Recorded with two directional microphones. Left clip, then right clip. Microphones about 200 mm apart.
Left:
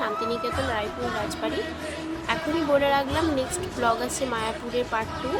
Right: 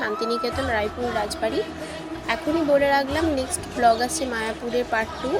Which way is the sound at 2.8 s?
5° right (ahead or behind).